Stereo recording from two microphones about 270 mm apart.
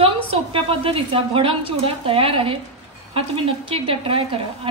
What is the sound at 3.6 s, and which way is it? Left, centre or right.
A woman's voice, centre.